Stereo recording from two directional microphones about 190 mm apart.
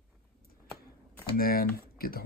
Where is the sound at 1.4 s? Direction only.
50° left (ahead or behind).